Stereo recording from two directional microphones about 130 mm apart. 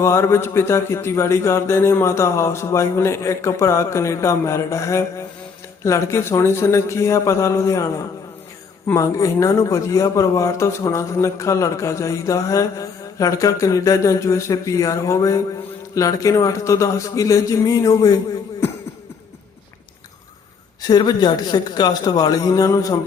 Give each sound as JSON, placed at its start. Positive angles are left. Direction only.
{"t": 0.0, "sound": "speech", "side_deg": 20}
{"t": 20.8, "sound": "a man's voice", "side_deg": 30}